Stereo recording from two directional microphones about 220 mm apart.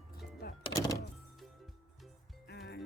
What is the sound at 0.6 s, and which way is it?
Music, 15° left (ahead or behind).